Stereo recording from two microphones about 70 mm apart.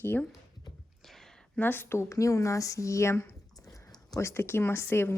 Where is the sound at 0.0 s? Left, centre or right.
Left.